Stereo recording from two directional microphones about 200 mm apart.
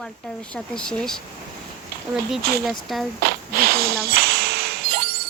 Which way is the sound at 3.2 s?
50° right (ahead or behind).